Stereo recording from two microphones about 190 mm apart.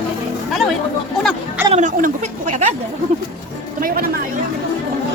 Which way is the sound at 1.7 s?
40° right (ahead or behind).